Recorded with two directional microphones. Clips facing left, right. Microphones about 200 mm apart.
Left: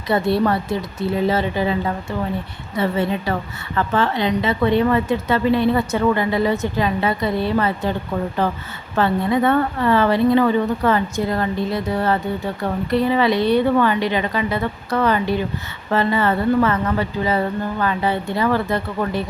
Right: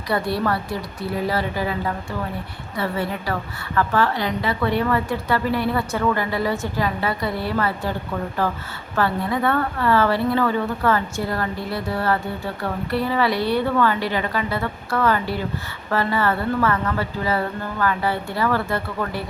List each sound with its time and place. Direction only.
0.1 s a woman's voice: 25° left (ahead or behind)
2.7 s a woman's voice: 20° left (ahead or behind)